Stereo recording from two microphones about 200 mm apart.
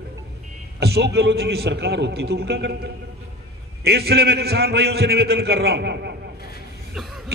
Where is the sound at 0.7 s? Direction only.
55° right (ahead or behind).